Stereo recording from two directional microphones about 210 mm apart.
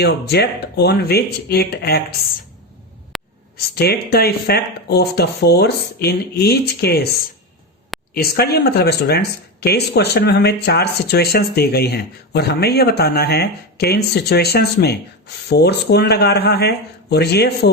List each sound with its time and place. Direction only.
0.0 s speech: 50° left (ahead or behind)
3.1 s a sound: centre (ahead or behind)
3.8 s speech: 50° left (ahead or behind)